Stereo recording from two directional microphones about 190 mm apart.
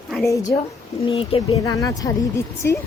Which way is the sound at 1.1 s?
30° left (ahead or behind).